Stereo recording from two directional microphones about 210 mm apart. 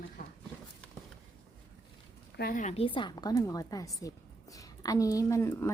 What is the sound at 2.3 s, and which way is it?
A woman's voice, 45° left (ahead or behind).